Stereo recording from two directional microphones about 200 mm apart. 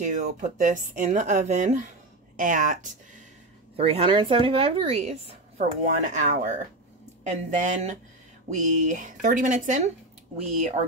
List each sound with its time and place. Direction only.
0.0 s speech: 40° right (ahead or behind)
3.7 s speech: 30° right (ahead or behind)